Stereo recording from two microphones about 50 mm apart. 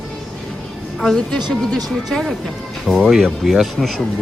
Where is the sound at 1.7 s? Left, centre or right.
Centre.